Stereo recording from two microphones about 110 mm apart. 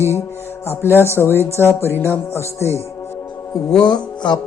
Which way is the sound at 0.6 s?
20° left (ahead or behind).